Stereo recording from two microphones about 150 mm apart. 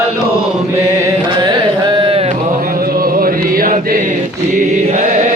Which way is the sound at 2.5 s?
80° right.